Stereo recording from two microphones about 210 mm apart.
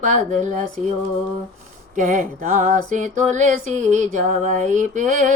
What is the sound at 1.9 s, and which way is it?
Music, 40° right (ahead or behind).